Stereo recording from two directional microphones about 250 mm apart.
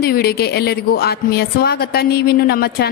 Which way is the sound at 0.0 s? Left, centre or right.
Left.